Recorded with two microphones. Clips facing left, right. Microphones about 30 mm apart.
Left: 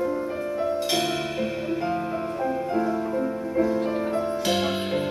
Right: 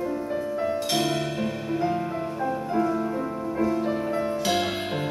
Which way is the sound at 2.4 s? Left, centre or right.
Centre.